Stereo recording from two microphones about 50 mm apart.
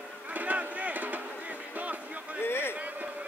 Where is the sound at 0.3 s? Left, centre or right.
Right.